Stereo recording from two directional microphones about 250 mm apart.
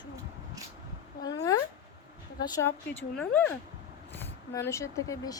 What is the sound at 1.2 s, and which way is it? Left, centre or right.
Speech, centre.